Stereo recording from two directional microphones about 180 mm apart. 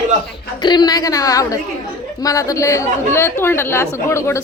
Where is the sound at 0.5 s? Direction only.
25° left (ahead or behind).